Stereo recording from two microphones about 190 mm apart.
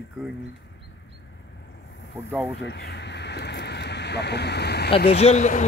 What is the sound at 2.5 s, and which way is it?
Speech, 65° left (ahead or behind).